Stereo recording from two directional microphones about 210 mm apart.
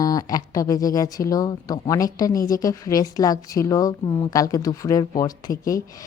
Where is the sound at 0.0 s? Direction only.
15° left (ahead or behind).